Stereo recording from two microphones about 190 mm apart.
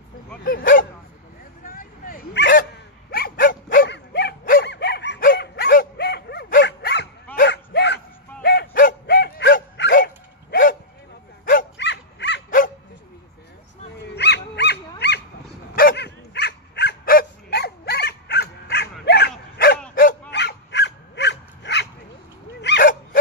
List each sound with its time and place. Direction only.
0.4 s bow-wow: 45° left (ahead or behind)
1.6 s dog: 50° left (ahead or behind)
3.8 s dog: 65° left (ahead or behind)
7.4 s a sound: 65° left (ahead or behind)
9.9 s dog: 50° left (ahead or behind)
11.7 s dog: 65° left (ahead or behind)
12.4 s bow-wow: 45° left (ahead or behind)
14.1 s dog: 60° left (ahead or behind)
15.0 s a sound: 60° left (ahead or behind)
15.7 s dog: 50° left (ahead or behind)